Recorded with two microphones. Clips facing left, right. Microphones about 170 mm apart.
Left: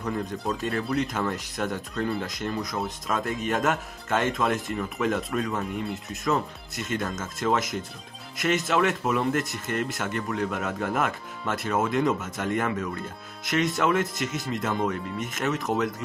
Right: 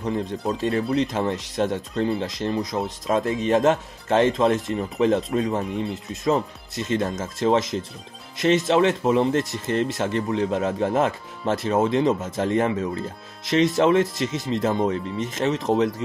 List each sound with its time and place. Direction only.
0.0 s speech: 25° right (ahead or behind)